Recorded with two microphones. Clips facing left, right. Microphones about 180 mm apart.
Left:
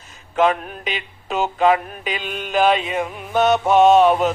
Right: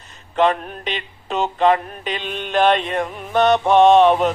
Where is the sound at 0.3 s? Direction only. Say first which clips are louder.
Even; 5° left (ahead or behind).